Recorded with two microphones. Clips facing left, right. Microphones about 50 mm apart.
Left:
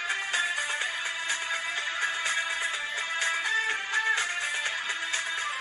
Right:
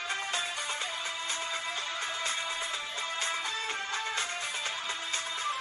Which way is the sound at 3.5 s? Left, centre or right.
Left.